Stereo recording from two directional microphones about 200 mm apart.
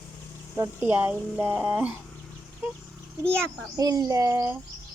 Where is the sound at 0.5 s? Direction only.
15° right (ahead or behind).